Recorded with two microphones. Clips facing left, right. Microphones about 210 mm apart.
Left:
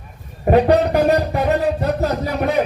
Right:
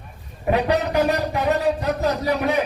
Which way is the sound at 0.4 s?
45° left (ahead or behind).